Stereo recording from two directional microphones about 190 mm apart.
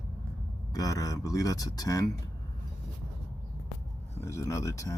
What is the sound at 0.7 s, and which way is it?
Speech, 20° left (ahead or behind).